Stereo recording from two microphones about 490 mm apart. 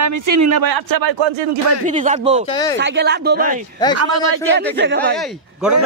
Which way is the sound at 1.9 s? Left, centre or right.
Centre.